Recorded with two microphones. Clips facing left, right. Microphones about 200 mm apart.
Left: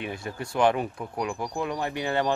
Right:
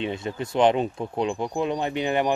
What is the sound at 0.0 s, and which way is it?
Speech, 20° right (ahead or behind).